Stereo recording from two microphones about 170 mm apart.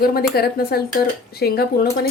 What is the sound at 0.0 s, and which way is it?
Speech, 60° left (ahead or behind).